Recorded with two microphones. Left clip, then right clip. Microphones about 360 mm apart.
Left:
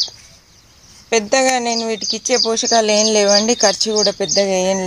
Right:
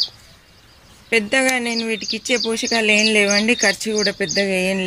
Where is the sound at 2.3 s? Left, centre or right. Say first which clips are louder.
Left 5 dB; centre.